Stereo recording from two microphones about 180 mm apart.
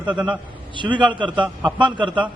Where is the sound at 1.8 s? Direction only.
25° right (ahead or behind).